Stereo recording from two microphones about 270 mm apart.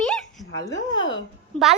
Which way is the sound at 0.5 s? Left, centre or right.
Left.